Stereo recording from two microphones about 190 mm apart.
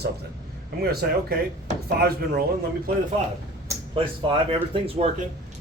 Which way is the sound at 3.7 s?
25° right (ahead or behind).